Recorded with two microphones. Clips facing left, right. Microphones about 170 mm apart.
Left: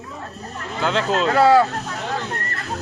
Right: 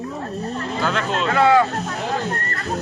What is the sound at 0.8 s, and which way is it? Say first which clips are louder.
Speech: left 4 dB; 25° left (ahead or behind).